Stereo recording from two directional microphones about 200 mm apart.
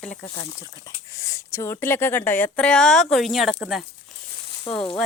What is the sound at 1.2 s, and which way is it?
Speech, 15° left (ahead or behind).